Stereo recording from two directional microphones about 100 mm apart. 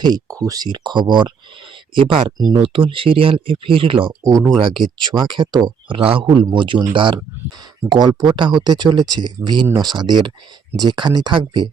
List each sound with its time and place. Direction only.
0.0 s speech: 40° right (ahead or behind)
2.0 s speech: 60° right (ahead or behind)
4.2 s speech: 35° right (ahead or behind)
6.0 s a man's voice: 70° right (ahead or behind)
6.2 s speech: 50° right (ahead or behind)